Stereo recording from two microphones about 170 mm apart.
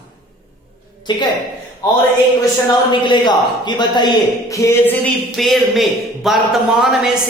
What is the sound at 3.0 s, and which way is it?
A man's voice, 25° left (ahead or behind).